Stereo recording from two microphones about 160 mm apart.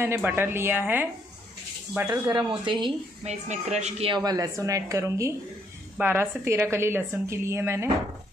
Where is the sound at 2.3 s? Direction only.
30° right (ahead or behind).